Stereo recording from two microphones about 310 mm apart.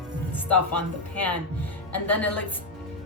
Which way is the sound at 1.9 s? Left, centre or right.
Centre.